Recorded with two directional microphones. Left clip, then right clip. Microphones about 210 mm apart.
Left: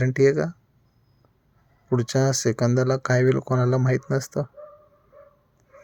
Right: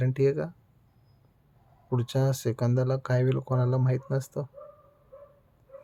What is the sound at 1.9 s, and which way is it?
Speech, 25° left (ahead or behind).